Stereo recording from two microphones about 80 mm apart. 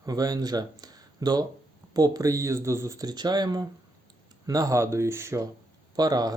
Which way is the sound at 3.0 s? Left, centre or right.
Right.